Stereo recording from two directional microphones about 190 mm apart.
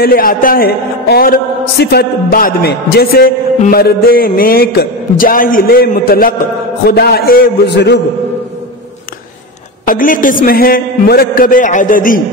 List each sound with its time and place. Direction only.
0.0 s a man's voice: 50° left (ahead or behind)
9.8 s a man's voice: 45° left (ahead or behind)